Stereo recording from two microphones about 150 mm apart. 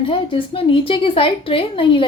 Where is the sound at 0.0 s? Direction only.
35° left (ahead or behind).